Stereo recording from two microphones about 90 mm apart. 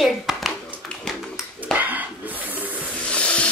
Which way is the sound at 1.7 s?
20° right (ahead or behind).